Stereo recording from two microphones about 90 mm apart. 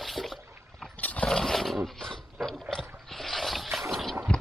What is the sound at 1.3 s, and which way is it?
Roaring cats, 5° left (ahead or behind).